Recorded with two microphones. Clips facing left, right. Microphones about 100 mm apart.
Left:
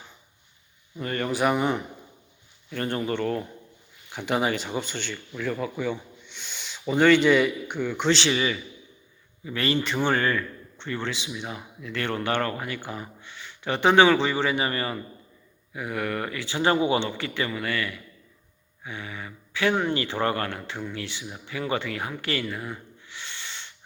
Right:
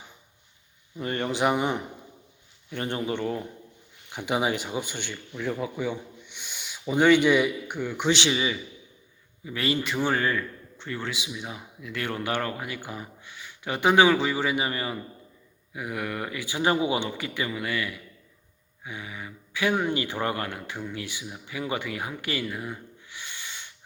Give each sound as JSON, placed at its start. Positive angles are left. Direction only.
{"t": 0.9, "sound": "a man's voice", "side_deg": -20}